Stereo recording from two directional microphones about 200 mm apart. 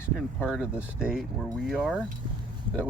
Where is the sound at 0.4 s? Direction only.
5° right (ahead or behind).